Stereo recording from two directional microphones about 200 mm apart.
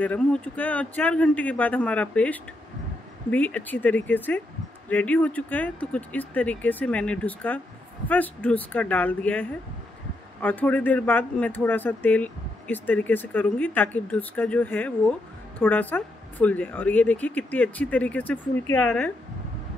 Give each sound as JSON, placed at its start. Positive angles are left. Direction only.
{"t": 0.0, "sound": "speech", "side_deg": 5}